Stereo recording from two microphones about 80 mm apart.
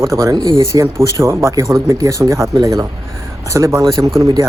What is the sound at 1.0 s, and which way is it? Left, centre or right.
Speech, right.